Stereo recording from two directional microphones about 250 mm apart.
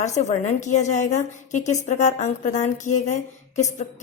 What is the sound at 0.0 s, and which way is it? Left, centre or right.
A woman's voice, left.